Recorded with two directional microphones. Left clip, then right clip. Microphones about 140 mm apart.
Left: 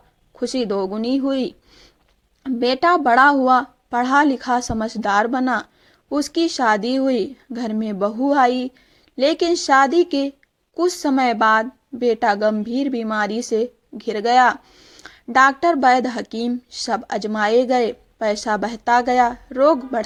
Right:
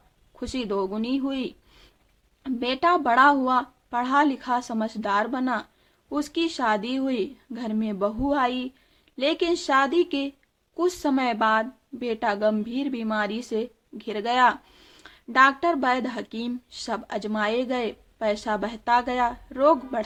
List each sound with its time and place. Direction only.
0.3 s a woman's voice: 30° left (ahead or behind)
15.0 s a woman's voice: 35° left (ahead or behind)